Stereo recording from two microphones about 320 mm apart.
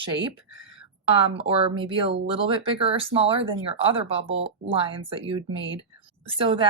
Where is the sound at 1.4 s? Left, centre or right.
Centre.